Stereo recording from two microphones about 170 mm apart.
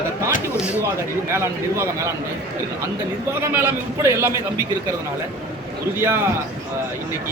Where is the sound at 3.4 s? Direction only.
15° right (ahead or behind).